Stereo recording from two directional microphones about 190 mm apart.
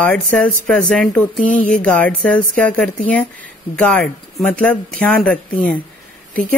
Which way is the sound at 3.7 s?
5° left (ahead or behind).